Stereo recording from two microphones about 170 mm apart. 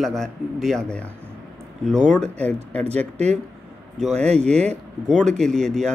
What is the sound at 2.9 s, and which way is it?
Speech, 40° right (ahead or behind).